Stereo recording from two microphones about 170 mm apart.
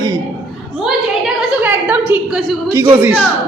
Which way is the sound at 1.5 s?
10° right (ahead or behind).